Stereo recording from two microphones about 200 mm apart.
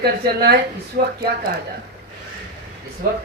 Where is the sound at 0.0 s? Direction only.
50° right (ahead or behind).